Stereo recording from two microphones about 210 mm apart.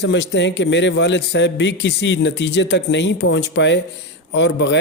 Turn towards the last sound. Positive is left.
turn(degrees=55)  # may be behind; listen again after turning